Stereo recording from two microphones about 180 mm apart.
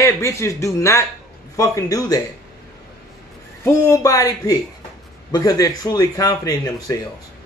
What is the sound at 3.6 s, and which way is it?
Speech, 15° left (ahead or behind).